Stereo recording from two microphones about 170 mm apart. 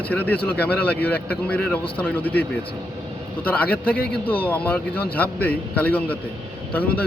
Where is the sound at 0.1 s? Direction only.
10° left (ahead or behind).